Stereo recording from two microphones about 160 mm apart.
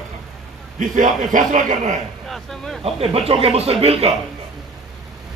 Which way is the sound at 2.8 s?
35° right (ahead or behind).